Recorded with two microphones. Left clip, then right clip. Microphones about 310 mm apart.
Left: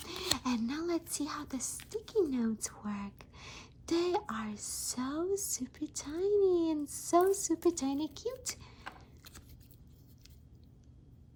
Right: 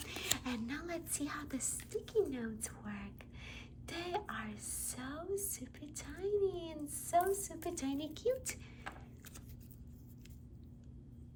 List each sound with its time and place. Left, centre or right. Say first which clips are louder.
0.3 s a woman's voice: left 6 dB; centre